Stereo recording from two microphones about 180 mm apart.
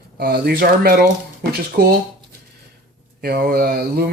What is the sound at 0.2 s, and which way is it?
Speech, 60° right (ahead or behind).